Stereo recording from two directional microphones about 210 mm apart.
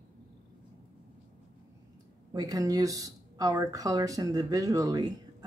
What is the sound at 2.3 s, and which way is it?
Speech, 15° right (ahead or behind).